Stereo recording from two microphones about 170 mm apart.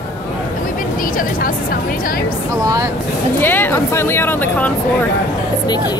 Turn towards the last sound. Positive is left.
turn(degrees=10)  # may be behind; listen again after turning